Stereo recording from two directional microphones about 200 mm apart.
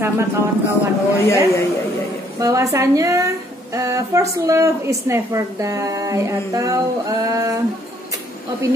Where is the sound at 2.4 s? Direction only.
15° right (ahead or behind).